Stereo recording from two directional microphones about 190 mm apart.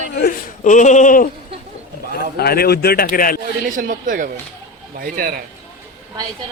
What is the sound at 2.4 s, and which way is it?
Speech, 55° left (ahead or behind).